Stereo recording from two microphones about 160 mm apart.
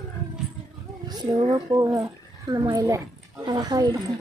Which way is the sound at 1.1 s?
30° right (ahead or behind).